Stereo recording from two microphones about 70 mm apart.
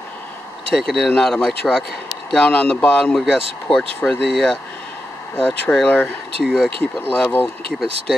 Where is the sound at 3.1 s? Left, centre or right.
Centre.